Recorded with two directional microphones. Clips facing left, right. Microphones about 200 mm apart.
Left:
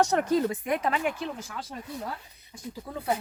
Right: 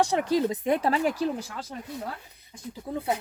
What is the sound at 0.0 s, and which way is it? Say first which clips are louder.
Speech: even; 15° right (ahead or behind).